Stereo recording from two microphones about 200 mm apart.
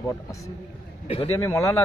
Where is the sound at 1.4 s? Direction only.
10° left (ahead or behind).